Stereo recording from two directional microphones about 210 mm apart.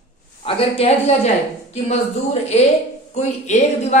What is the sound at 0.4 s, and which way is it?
Speech, 25° left (ahead or behind).